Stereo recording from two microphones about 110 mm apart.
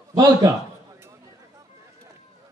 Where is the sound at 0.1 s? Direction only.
35° right (ahead or behind).